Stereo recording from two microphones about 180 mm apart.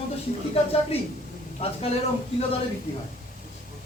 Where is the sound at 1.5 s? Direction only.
35° left (ahead or behind).